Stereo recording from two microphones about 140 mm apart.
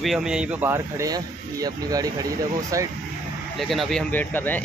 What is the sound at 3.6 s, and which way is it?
Speech, centre (ahead or behind).